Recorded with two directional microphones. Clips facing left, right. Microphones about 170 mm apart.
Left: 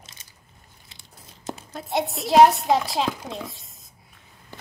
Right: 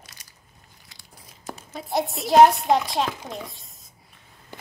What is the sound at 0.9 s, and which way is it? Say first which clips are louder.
Tearing: left 1 dB; 25° left (ahead or behind).